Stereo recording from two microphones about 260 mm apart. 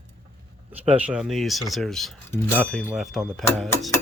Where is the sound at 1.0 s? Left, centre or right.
Centre.